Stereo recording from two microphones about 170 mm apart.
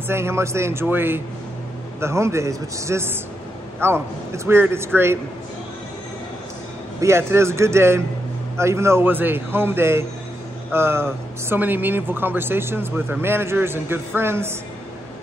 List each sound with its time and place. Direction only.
0.1 s speech: 15° right (ahead or behind)
7.0 s speech: 15° right (ahead or behind)